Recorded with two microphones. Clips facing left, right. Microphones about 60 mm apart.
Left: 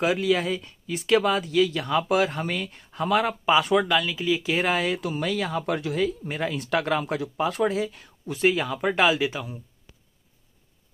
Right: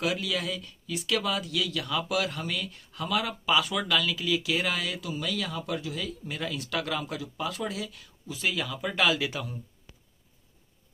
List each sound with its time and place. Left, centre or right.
0.0 s speech: left
6.0 s speech: left
8.9 s speech: left
9.3 s speech: centre